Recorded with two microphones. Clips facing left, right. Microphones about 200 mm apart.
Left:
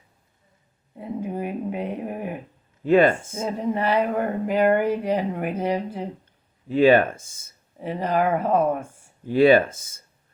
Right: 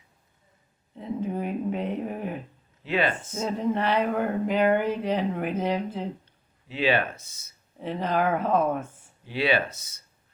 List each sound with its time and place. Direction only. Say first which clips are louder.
0.9 s speech: left 1 dB; 10° left (ahead or behind)
2.8 s speech: left 9 dB; 50° left (ahead or behind)
3.6 s speech: left 3 dB; 10° left (ahead or behind)
6.7 s speech: left 9 dB; 50° left (ahead or behind)
7.8 s speech: left 3 dB; 10° left (ahead or behind)
9.2 s speech: left 10 dB; 45° left (ahead or behind)